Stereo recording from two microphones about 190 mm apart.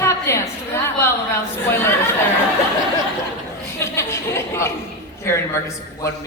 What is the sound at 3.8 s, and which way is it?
Speech, 15° left (ahead or behind).